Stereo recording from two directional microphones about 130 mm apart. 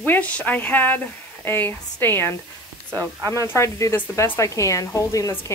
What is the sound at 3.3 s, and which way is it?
A woman's voice, 20° left (ahead or behind).